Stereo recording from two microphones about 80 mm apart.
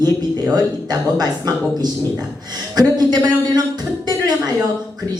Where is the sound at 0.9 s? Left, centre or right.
Right.